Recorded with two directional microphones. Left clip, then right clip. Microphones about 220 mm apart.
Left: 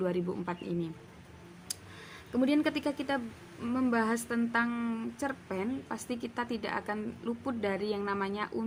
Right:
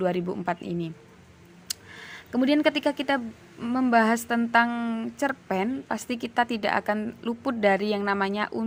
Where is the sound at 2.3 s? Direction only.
35° right (ahead or behind).